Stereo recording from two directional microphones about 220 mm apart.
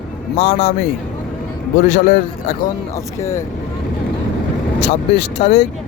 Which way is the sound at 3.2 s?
10° left (ahead or behind).